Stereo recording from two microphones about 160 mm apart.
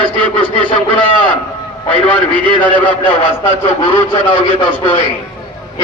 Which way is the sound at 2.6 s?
35° left (ahead or behind).